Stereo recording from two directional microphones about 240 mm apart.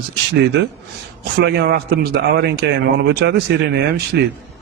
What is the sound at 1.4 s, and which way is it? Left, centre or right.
A man's voice, right.